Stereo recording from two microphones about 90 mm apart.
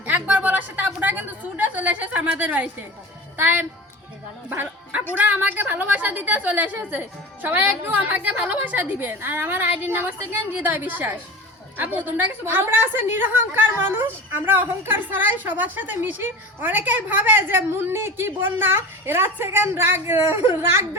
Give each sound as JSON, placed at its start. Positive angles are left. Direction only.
{"t": 0.0, "sound": "a woman's voice", "side_deg": -20}